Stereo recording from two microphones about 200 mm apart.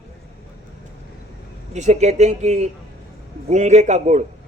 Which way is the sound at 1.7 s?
35° right (ahead or behind).